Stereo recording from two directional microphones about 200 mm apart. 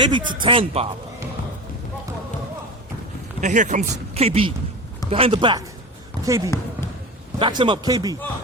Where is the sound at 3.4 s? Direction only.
35° right (ahead or behind).